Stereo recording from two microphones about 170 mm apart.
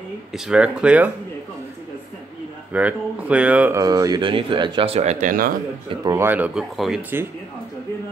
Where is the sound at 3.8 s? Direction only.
20° right (ahead or behind); by 5.6 s 55° right (ahead or behind).